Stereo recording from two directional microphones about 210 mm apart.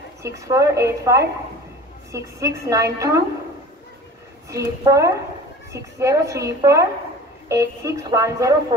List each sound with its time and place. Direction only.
0.2 s a woman's voice: 15° right (ahead or behind)
4.5 s a woman's voice: 15° right (ahead or behind)